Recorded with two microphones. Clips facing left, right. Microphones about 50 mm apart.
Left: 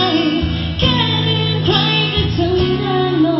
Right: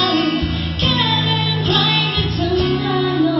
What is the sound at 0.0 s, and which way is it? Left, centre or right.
Music, left.